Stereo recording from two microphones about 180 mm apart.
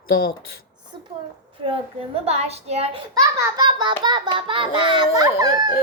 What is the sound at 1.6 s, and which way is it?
A woman's voice, 30° right (ahead or behind).